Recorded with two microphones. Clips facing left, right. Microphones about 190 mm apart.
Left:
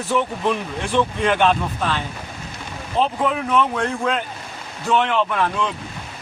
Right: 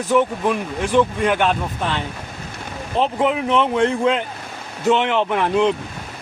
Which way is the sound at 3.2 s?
20° right (ahead or behind).